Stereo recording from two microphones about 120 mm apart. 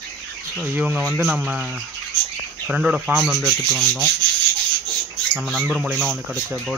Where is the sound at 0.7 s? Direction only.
15° right (ahead or behind).